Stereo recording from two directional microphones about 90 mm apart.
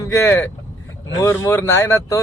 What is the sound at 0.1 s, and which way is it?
Speech, 30° left (ahead or behind).